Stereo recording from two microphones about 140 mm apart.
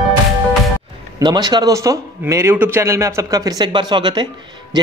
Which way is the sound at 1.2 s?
30° right (ahead or behind).